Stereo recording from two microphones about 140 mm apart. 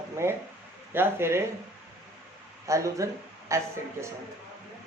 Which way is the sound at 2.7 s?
20° right (ahead or behind).